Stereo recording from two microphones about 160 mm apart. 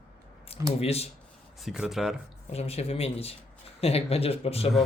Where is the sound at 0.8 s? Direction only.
40° left (ahead or behind).